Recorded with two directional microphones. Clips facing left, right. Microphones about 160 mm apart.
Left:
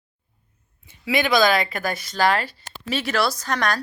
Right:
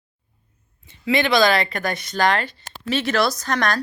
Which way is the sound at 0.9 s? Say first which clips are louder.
Right 2 dB; 5° left (ahead or behind).